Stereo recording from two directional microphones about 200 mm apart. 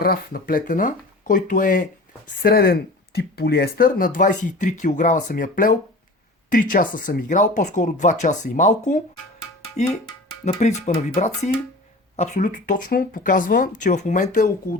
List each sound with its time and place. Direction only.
0.0 s speech: 50° left (ahead or behind)
10.4 s speech: 35° left (ahead or behind)